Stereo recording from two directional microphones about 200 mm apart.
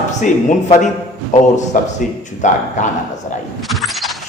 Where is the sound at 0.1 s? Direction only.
35° left (ahead or behind).